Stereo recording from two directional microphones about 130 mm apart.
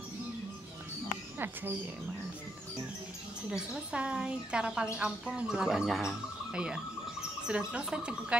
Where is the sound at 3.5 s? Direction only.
5° right (ahead or behind).